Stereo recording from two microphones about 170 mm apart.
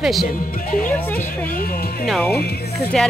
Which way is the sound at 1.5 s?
60° left (ahead or behind).